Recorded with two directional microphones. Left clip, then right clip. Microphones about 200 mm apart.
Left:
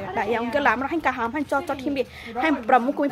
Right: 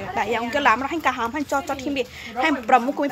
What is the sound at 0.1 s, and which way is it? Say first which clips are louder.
Speech: right 1 dB; 5° left (ahead or behind).